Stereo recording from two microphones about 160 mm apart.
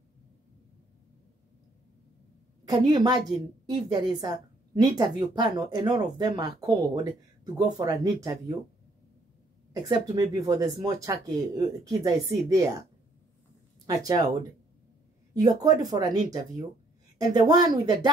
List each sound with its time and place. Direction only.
2.6 s a woman's voice: 25° right (ahead or behind)
9.8 s a woman's voice: 25° right (ahead or behind)
13.8 s a woman's voice: 25° right (ahead or behind)
15.3 s a woman's voice: 25° right (ahead or behind)